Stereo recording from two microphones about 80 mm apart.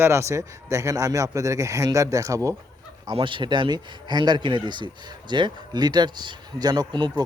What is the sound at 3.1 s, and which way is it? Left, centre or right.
Speech, right.